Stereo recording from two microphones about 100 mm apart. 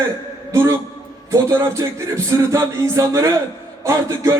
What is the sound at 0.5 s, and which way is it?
Speech, 25° right (ahead or behind).